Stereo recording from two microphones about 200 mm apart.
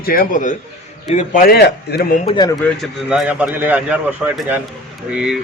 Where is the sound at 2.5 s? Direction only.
Centre (ahead or behind).